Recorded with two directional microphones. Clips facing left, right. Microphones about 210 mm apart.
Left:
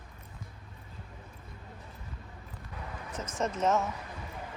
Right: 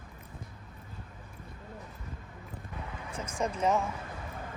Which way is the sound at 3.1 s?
10° right (ahead or behind).